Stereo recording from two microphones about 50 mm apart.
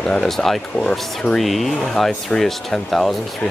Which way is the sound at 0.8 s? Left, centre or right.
Centre.